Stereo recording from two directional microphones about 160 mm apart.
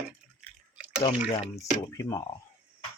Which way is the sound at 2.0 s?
20° left (ahead or behind).